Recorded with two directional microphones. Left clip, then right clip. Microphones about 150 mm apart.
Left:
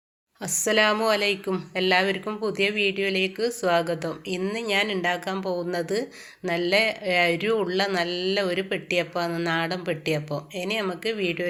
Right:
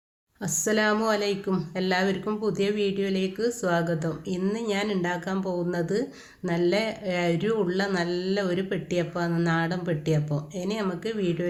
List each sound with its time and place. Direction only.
0.4 s speech: 5° left (ahead or behind)